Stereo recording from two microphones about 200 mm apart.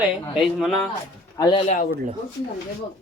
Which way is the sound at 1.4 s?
20° left (ahead or behind).